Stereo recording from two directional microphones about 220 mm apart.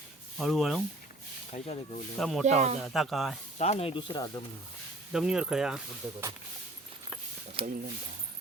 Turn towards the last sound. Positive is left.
turn(degrees=-25)  # may be behind; listen again after turning